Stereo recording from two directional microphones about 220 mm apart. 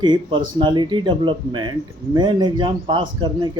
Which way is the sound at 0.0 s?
20° right (ahead or behind).